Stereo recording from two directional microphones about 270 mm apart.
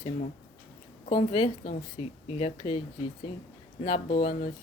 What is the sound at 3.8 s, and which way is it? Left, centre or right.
Speech, left.